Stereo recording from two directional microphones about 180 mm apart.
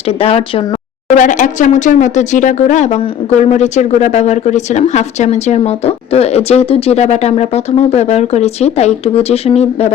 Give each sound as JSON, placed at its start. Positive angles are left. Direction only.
{"t": 0.2, "sound": "speech", "side_deg": 30}
{"t": 1.1, "sound": "speech", "side_deg": 45}